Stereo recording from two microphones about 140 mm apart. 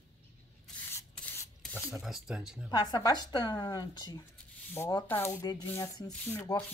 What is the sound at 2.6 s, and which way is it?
Speech, 30° left (ahead or behind).